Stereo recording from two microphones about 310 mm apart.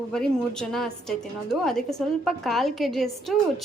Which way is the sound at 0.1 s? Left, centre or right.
Centre.